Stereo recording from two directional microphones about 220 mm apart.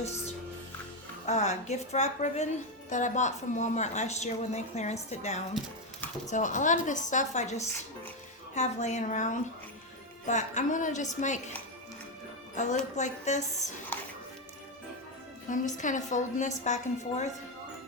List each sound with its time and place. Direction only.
1.3 s speech: 30° left (ahead or behind)
12.5 s speech: 35° left (ahead or behind)
13.9 s music: 10° left (ahead or behind)
15.4 s speech: 35° left (ahead or behind)